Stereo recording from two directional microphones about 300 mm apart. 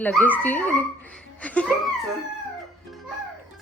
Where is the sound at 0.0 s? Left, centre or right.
Centre.